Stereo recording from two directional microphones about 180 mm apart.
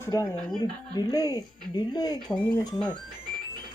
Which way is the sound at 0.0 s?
20° left (ahead or behind).